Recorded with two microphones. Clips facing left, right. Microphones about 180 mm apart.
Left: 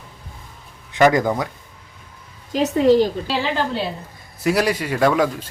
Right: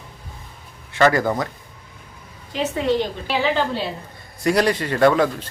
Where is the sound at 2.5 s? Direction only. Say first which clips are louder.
Left 6 dB; 40° left (ahead or behind).